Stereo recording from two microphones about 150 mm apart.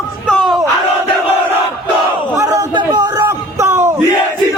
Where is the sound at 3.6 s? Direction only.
15° right (ahead or behind).